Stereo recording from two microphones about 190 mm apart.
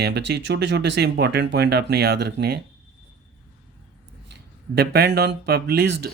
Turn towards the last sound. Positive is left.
turn(degrees=-55)  # may be behind; listen again after turning